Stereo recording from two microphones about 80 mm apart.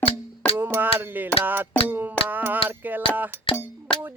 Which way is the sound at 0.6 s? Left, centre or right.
Right.